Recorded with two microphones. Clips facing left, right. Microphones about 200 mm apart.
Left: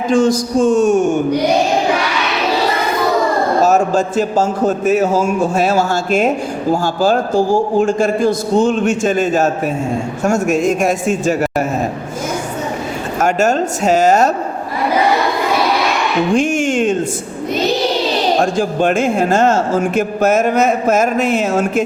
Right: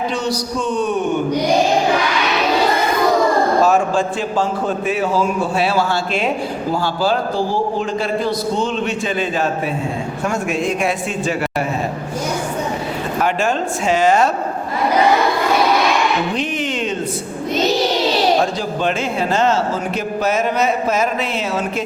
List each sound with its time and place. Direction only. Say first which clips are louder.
0.1 s speech: left 8 dB; 50° left (ahead or behind)
3.6 s speech: left 2 dB; 40° left (ahead or behind)
13.1 s speech: left 5 dB; 45° left (ahead or behind)
16.3 s speech: left 7 dB; 45° left (ahead or behind)
18.5 s speech: left 6 dB; 50° left (ahead or behind)